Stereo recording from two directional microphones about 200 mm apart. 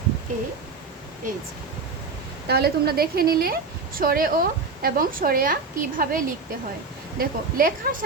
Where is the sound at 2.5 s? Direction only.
50° right (ahead or behind).